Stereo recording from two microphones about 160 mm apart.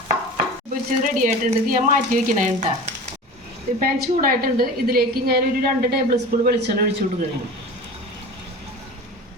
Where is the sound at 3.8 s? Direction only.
65° right (ahead or behind).